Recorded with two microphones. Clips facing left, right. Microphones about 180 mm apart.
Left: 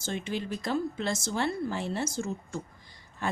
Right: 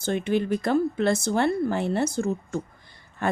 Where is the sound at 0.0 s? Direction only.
60° right (ahead or behind).